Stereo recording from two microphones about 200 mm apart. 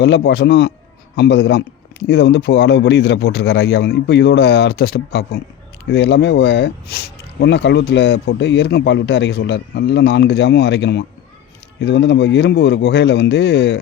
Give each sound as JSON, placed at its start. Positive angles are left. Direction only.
{"t": 0.0, "sound": "speech", "side_deg": 60}